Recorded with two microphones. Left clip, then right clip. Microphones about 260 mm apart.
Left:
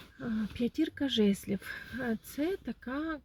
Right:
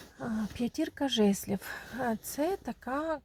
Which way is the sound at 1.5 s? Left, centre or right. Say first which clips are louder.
Right 2 dB; right.